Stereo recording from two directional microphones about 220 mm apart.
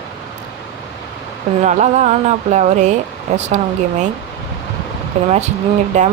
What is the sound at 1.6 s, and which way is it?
Speech, 30° right (ahead or behind).